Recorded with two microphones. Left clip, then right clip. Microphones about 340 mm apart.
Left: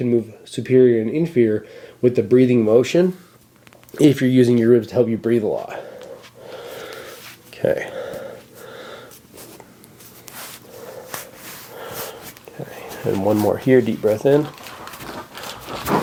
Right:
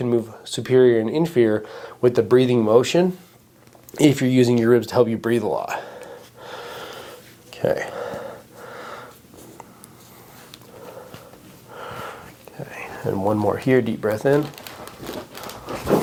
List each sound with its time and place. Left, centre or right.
0.0 s speech: right
2.6 s speech: right
6.4 s a sound: right
8.7 s snort: centre
13.1 s speech: right